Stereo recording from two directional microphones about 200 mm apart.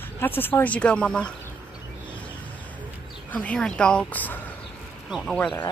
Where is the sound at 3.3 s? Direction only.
5° left (ahead or behind).